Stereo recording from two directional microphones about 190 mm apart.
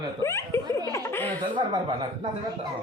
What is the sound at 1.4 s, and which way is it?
Speech, 25° right (ahead or behind).